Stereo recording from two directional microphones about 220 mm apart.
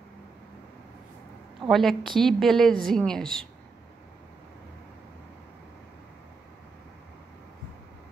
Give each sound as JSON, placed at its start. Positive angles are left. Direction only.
{"t": 1.7, "sound": "a woman's voice", "side_deg": 0}